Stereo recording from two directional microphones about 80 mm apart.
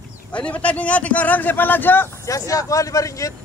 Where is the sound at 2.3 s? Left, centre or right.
Left.